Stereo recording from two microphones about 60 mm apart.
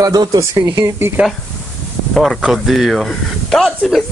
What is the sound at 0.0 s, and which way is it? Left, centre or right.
Speech, right.